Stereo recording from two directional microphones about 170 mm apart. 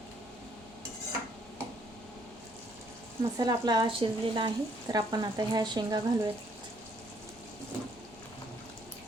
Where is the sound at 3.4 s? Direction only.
25° right (ahead or behind).